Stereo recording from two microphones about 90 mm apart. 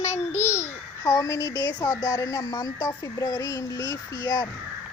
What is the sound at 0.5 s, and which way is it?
A child's voice, 30° left (ahead or behind).